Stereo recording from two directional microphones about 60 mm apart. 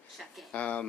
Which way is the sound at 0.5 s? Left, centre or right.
Left.